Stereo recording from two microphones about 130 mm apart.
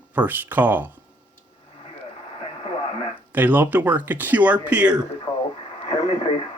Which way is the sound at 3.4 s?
15° right (ahead or behind).